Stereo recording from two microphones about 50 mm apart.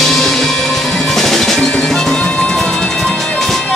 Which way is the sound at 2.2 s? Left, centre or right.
Left.